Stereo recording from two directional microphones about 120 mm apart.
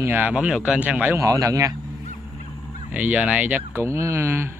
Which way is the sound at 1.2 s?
30° right (ahead or behind).